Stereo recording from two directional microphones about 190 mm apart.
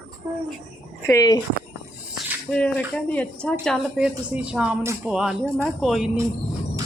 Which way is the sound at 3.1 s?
5° left (ahead or behind).